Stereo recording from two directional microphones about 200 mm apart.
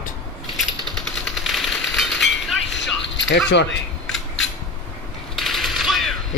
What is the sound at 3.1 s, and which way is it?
Keys jangling, 65° left (ahead or behind).